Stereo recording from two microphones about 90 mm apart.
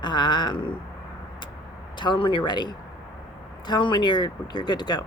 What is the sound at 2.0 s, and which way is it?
Speech, 65° left (ahead or behind).